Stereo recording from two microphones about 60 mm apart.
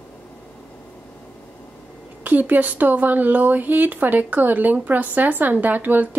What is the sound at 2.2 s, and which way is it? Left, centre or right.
A woman's voice, right.